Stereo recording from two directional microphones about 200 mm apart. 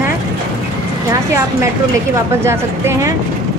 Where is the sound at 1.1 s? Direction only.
15° right (ahead or behind).